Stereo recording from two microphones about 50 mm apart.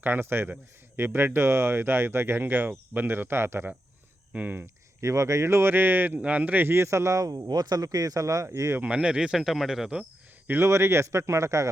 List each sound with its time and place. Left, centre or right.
0.0 s speech: right
4.4 s speech: right
4.6 s speech: right
6.1 s speech: right
6.7 s speech: right
8.2 s speech: right
9.0 s speech: centre
10.6 s speech: right